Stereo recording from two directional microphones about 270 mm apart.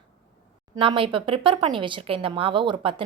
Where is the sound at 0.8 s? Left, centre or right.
Centre.